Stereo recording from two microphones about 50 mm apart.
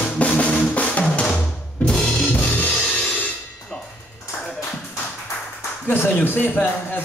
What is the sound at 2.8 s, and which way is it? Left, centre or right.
Music, left.